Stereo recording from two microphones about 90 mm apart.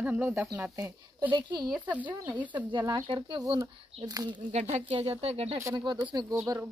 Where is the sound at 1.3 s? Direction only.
55° right (ahead or behind).